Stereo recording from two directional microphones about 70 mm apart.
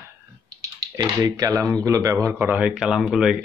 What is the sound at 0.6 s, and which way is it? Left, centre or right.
Speech, right.